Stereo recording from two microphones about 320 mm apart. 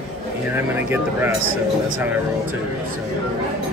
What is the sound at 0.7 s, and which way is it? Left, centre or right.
Speech, centre.